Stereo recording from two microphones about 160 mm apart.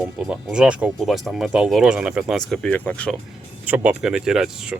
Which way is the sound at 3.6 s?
10° right (ahead or behind).